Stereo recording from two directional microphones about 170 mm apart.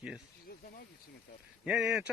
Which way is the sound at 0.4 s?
60° left (ahead or behind).